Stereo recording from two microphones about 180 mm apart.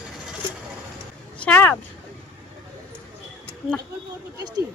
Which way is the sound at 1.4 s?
10° left (ahead or behind).